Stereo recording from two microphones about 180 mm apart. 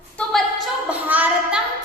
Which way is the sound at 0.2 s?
Centre (ahead or behind).